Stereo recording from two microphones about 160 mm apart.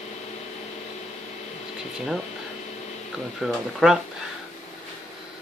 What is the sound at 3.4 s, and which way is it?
Speech, centre (ahead or behind).